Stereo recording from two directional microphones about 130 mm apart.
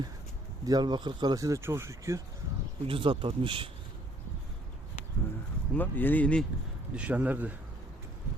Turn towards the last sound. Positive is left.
turn(degrees=-10)  # may be behind; listen again after turning